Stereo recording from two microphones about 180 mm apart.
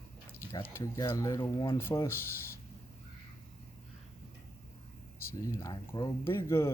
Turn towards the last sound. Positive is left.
turn(degrees=15)  # may be behind; listen again after turning